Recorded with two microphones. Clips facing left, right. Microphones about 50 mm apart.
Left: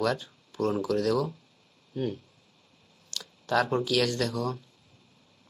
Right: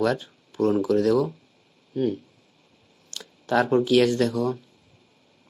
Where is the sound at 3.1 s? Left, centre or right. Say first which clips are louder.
Right 4 dB; right.